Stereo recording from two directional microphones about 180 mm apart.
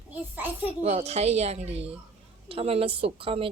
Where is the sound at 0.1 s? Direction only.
10° right (ahead or behind).